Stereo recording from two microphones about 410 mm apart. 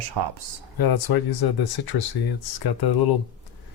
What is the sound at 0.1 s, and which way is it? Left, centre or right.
Speech, right.